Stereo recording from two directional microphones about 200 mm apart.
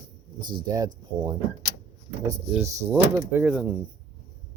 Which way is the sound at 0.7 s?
20° right (ahead or behind).